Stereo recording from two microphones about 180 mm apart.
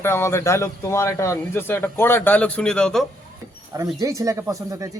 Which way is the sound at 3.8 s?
15° right (ahead or behind).